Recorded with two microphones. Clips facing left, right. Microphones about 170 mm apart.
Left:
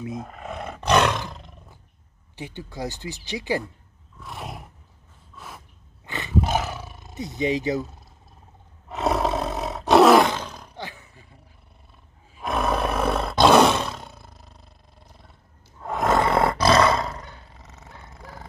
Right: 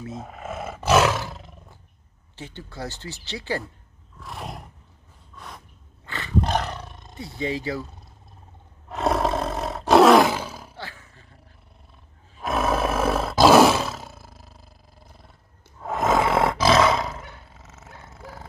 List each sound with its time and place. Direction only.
0.2 s roar: 5° right (ahead or behind)
2.3 s speech: 15° left (ahead or behind)
4.2 s roar: centre (ahead or behind)
5.3 s a sound: 5° left (ahead or behind)
6.0 s roar: 20° left (ahead or behind)
6.4 s roar: 5° left (ahead or behind)
7.2 s speech: 20° left (ahead or behind)
8.8 s roar: centre (ahead or behind)
10.8 s roar: 20° left (ahead or behind)
12.4 s roar: centre (ahead or behind)